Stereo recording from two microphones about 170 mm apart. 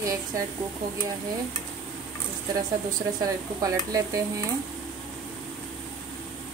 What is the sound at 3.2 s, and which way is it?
Speech, 20° right (ahead or behind).